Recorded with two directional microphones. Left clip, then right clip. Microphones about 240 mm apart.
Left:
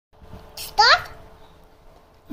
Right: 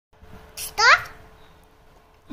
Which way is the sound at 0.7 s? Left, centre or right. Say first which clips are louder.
Left 1 dB; right.